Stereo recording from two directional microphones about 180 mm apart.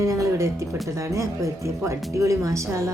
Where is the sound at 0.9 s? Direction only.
15° right (ahead or behind).